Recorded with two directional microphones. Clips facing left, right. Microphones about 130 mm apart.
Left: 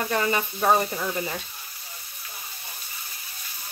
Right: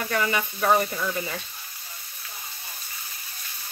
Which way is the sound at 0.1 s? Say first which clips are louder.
Right 1 dB; 35° left (ahead or behind).